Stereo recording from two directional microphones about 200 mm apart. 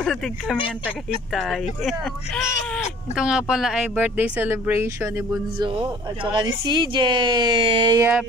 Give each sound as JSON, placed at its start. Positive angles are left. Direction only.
{"t": 0.0, "sound": "speech", "side_deg": 0}
{"t": 5.6, "sound": "speech", "side_deg": -25}